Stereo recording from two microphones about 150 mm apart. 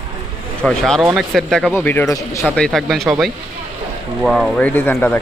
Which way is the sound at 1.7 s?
15° left (ahead or behind).